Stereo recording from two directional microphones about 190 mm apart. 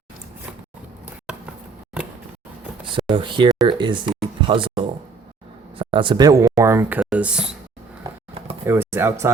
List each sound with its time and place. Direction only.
3.1 s a man's voice: 25° right (ahead or behind); by 7.5 s 5° right (ahead or behind)
8.6 s speech: 15° right (ahead or behind)